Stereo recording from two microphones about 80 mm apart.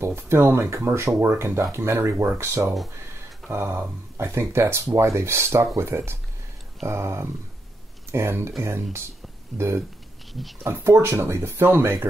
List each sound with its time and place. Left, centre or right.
0.0 s speech: right
9.5 s speech: centre
10.6 s speech: right